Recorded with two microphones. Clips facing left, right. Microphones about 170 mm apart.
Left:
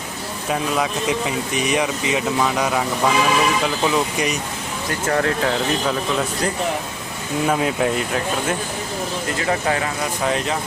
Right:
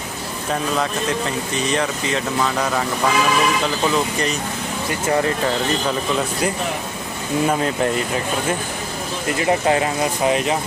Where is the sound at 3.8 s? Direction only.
10° left (ahead or behind).